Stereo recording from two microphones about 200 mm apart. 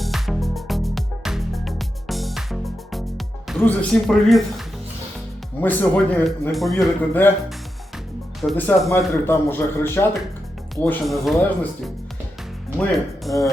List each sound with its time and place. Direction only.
0.0 s music: centre (ahead or behind)
3.6 s speech: 5° left (ahead or behind)
5.5 s speech: 10° left (ahead or behind)
8.4 s speech: 5° left (ahead or behind)
10.8 s speech: centre (ahead or behind)
12.9 s speech: centre (ahead or behind)